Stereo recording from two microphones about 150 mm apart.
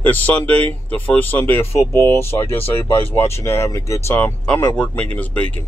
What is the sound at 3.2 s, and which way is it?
Speech, 15° left (ahead or behind).